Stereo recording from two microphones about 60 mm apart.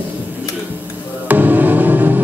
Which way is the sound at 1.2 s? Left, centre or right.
Right.